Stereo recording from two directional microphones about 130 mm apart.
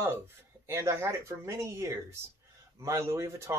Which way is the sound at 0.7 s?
20° right (ahead or behind).